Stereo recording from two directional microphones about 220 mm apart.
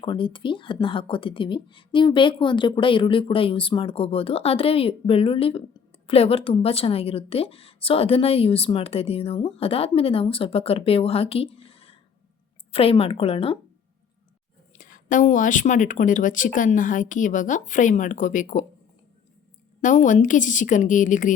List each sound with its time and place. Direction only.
0.0 s a woman's voice: 25° left (ahead or behind)
14.8 s speech: 35° left (ahead or behind)
19.8 s speech: 35° left (ahead or behind)